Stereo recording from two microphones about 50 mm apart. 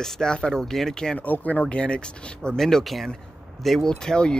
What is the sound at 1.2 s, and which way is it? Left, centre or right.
Speech, left.